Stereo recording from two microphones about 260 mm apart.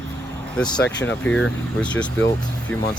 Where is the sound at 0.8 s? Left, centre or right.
Left.